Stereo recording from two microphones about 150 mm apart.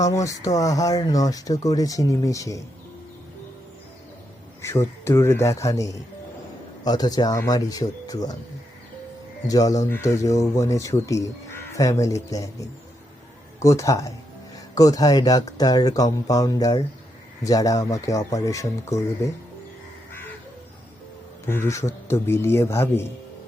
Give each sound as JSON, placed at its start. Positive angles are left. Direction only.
{"t": 0.0, "sound": "speech", "side_deg": 20}
{"t": 4.6, "sound": "speech", "side_deg": 20}
{"t": 9.5, "sound": "speech", "side_deg": 25}
{"t": 21.4, "sound": "speech", "side_deg": 15}